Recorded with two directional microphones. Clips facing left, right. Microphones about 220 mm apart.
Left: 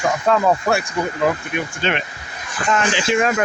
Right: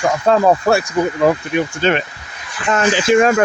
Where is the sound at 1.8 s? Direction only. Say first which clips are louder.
Right 6 dB; 40° right (ahead or behind).